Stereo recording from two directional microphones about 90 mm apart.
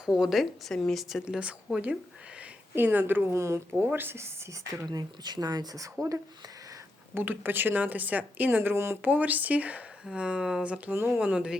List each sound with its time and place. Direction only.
0.0 s speech: 5° right (ahead or behind)
1.2 s speech: 10° right (ahead or behind); by 4.9 s 30° right (ahead or behind)
4.9 s speech: 50° right (ahead or behind)
7.1 s speech: 25° right (ahead or behind)
9.0 s speech: 20° right (ahead or behind)
10.9 s speech: 25° right (ahead or behind)